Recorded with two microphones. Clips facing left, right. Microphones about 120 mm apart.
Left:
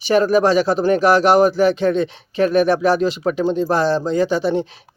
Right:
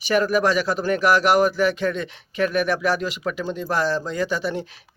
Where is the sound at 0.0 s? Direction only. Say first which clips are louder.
Left 5 dB; 25° left (ahead or behind).